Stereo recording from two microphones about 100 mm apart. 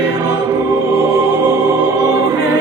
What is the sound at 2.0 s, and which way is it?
Choir, 40° right (ahead or behind).